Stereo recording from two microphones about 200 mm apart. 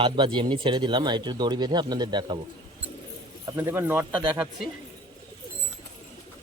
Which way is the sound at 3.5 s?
15° right (ahead or behind).